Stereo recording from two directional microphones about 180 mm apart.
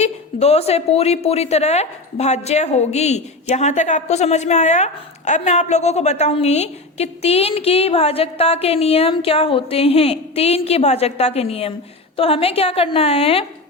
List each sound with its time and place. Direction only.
0.0 s a woman's voice: 35° left (ahead or behind)